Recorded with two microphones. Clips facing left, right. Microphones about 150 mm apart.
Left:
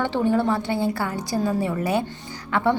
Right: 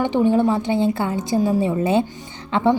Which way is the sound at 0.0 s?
20° right (ahead or behind).